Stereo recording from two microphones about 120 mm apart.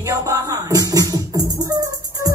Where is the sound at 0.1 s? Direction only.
30° right (ahead or behind).